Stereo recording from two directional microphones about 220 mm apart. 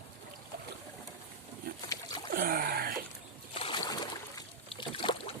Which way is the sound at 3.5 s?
25° left (ahead or behind).